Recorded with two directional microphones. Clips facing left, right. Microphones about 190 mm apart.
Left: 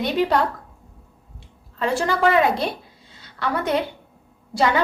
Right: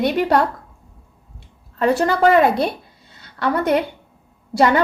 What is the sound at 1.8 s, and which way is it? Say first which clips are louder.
Speech: right 4 dB; 50° right (ahead or behind).